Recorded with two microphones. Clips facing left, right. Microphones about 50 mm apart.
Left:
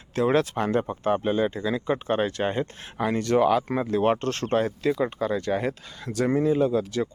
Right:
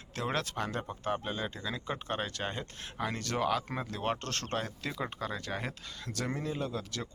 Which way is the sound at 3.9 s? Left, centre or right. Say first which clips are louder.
Left 12 dB; left.